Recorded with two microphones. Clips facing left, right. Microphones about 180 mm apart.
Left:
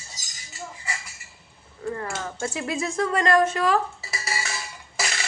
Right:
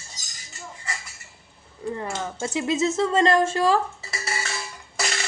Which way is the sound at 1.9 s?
20° right (ahead or behind).